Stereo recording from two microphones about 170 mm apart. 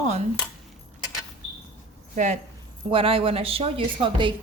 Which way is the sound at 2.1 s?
50° right (ahead or behind).